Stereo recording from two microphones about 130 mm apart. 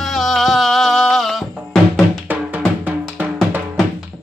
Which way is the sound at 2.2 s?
10° right (ahead or behind).